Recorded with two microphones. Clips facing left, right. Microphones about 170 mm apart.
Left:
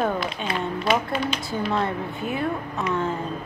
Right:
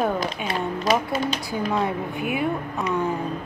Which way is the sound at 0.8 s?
40° right (ahead or behind).